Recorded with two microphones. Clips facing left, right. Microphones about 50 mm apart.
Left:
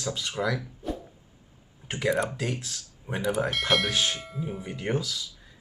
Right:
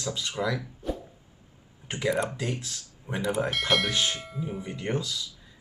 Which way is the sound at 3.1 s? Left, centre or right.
Left.